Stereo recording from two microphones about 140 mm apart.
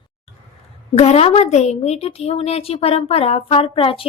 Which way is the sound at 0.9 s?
50° left (ahead or behind).